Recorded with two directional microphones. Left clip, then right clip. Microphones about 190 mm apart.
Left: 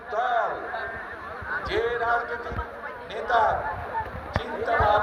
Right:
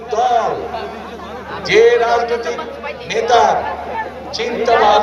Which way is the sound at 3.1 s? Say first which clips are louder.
Right 11 dB; 35° left (ahead or behind).